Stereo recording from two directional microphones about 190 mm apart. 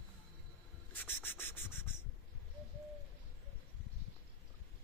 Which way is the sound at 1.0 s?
10° left (ahead or behind).